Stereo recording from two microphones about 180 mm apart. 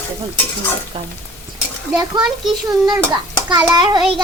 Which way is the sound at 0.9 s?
30° right (ahead or behind).